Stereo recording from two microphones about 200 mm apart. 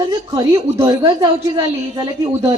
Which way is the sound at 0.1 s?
20° right (ahead or behind).